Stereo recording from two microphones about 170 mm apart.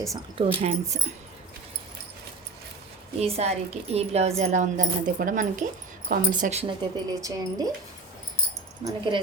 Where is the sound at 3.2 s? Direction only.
40° right (ahead or behind).